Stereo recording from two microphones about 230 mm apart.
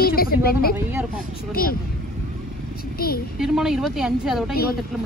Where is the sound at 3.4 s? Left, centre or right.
Centre.